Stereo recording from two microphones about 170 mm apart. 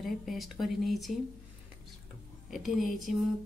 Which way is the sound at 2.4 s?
Centre (ahead or behind).